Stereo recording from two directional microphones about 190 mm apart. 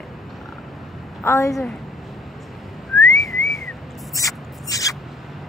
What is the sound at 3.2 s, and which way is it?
Whistling, centre (ahead or behind).